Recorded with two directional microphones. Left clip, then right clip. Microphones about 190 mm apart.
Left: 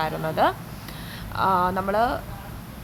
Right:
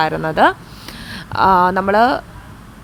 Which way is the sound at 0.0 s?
30° right (ahead or behind).